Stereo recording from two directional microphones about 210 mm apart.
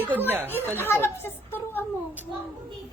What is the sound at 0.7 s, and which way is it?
Speech, 10° left (ahead or behind).